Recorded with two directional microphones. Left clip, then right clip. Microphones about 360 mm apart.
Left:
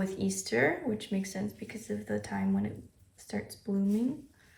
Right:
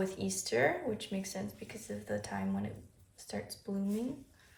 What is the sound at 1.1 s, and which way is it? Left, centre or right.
A woman's voice, right.